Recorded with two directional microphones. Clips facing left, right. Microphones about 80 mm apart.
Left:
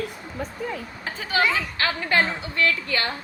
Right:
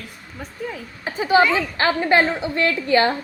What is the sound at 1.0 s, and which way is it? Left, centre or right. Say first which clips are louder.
A woman's voice: right 7 dB; right.